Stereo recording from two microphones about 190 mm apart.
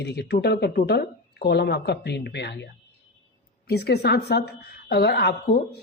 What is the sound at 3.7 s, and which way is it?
Speech, 55° left (ahead or behind).